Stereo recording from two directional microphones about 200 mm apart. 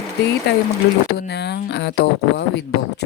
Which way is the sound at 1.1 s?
55° left (ahead or behind).